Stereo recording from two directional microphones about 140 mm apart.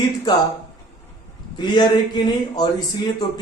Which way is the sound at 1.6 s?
30° left (ahead or behind).